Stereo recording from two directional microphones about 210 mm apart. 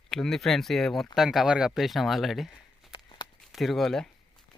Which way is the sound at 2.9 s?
20° left (ahead or behind).